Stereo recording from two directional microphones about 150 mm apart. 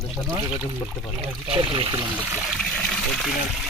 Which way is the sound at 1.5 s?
35° right (ahead or behind).